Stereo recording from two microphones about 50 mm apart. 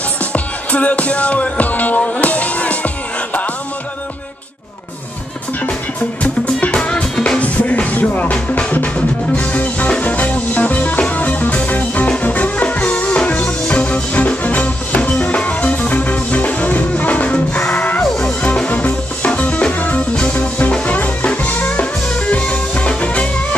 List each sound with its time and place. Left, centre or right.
0.3 s music: left
6.2 s music: left